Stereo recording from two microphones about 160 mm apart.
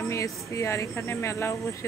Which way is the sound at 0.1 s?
20° left (ahead or behind).